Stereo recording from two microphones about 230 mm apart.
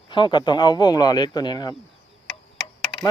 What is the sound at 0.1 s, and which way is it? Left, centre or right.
Speech, left.